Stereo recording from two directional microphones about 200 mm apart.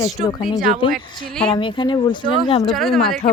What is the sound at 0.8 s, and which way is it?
Speech, 25° left (ahead or behind).